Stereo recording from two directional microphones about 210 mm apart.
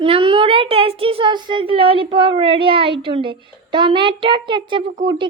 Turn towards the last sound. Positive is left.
turn(degrees=-25)  # may be behind; listen again after turning